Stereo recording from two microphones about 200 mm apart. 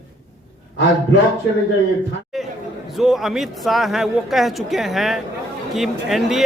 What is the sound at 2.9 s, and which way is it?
Speech, centre (ahead or behind).